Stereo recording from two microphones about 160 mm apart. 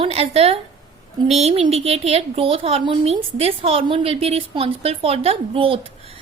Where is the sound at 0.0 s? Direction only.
40° right (ahead or behind).